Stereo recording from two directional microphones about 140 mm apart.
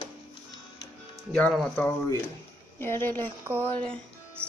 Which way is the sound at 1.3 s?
5° left (ahead or behind).